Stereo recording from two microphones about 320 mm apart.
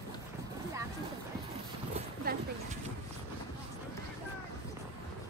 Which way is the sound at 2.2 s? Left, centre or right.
Right.